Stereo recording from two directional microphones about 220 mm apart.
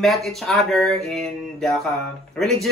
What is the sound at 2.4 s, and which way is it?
Speech, centre (ahead or behind).